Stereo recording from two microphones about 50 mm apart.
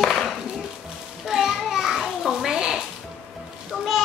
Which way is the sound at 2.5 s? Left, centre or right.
Centre.